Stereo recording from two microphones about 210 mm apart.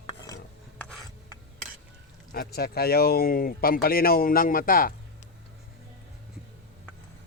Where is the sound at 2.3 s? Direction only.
45° left (ahead or behind).